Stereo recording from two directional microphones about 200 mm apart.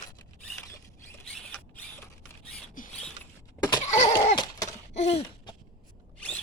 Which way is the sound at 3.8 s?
35° left (ahead or behind).